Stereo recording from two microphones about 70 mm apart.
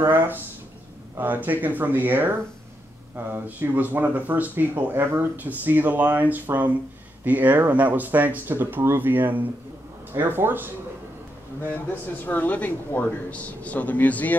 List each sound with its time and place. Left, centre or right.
0.0 s speech: right
12.3 s speech: left